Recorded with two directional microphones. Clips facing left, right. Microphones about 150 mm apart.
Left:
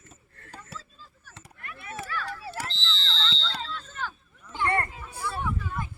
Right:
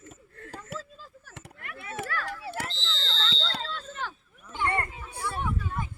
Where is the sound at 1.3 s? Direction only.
20° right (ahead or behind).